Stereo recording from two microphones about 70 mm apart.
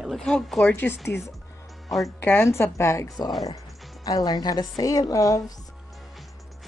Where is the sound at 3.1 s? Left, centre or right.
Left.